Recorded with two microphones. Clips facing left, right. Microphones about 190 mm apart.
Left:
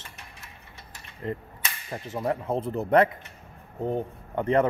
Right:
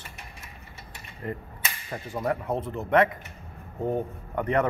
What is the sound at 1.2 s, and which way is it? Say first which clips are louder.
Speech: left 2 dB; 25° left (ahead or behind).